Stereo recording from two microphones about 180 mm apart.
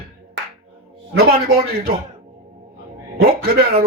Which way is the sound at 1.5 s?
55° right (ahead or behind).